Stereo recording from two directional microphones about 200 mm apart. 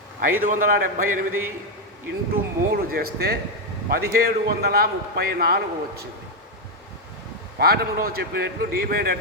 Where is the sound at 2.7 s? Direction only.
50° right (ahead or behind).